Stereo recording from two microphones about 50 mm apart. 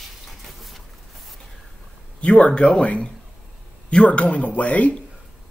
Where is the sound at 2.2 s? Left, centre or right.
Left.